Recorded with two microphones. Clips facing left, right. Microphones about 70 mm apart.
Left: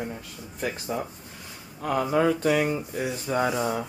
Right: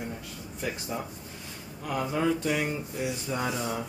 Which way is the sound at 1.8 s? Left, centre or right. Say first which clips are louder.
Left 5 dB; left.